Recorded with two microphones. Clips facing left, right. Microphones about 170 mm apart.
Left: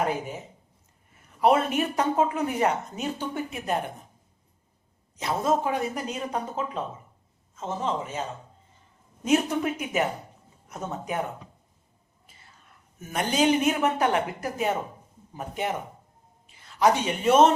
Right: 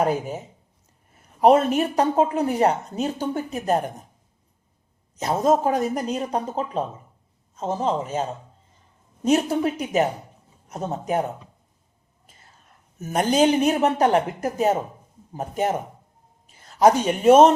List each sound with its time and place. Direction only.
1.4 s speech: 40° right (ahead or behind)
5.1 s speech: 40° right (ahead or behind)
9.2 s speech: 35° right (ahead or behind)
13.0 s speech: 40° right (ahead or behind)